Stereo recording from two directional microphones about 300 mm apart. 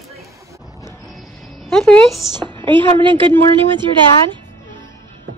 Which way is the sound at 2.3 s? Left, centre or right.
Centre.